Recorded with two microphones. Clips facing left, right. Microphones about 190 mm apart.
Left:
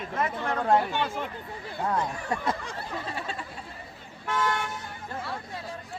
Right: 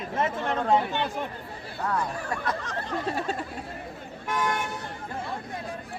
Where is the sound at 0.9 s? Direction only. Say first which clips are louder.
Even; 15° right (ahead or behind).